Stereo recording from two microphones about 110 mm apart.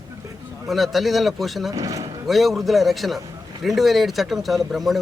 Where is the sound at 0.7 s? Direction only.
Centre (ahead or behind).